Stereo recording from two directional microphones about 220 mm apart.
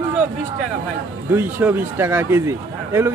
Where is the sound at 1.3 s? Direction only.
10° right (ahead or behind).